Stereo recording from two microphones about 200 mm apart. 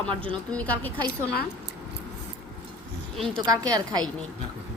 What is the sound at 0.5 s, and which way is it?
Speech, 10° left (ahead or behind).